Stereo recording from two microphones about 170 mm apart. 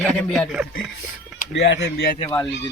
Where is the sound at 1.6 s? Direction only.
85° left.